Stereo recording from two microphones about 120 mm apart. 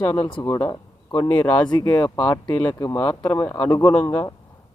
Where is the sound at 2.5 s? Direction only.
15° left (ahead or behind).